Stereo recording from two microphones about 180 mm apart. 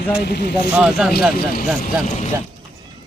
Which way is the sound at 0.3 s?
60° left (ahead or behind).